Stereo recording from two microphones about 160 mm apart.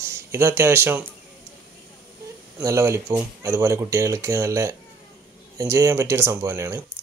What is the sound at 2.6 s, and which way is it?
Speech, 20° right (ahead or behind).